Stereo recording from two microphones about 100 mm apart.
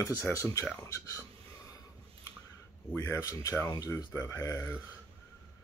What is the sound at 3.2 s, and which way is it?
Speech, 35° left (ahead or behind).